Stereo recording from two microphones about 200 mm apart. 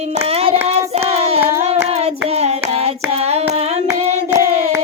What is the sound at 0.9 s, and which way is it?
Hands, 30° right (ahead or behind).